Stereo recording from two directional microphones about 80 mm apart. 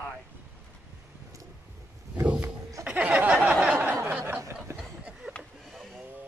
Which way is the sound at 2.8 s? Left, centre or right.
Centre.